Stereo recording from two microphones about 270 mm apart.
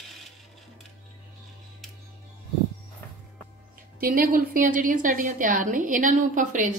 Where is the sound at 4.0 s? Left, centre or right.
Right.